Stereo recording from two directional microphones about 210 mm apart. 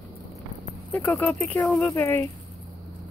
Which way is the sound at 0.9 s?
5° left (ahead or behind).